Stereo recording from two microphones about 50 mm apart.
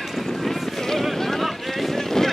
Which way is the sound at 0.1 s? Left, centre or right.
Centre.